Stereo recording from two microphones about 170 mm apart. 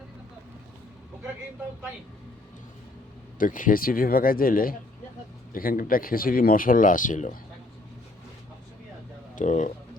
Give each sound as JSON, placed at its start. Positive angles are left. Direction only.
{"t": 3.3, "sound": "speech", "side_deg": 50}
{"t": 9.3, "sound": "speech", "side_deg": 45}